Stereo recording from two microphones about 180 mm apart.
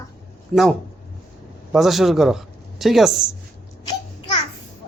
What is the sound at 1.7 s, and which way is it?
A man's voice, centre (ahead or behind).